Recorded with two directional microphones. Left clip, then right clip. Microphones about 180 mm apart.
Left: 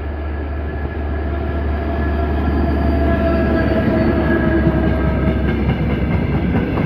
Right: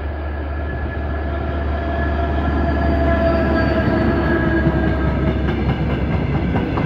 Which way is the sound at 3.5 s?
40° left (ahead or behind).